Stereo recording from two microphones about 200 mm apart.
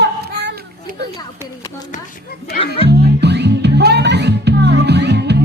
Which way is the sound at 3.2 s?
55° right (ahead or behind).